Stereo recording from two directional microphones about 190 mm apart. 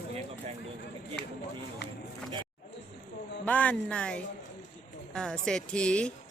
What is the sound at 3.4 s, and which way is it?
A woman's voice, 10° left (ahead or behind).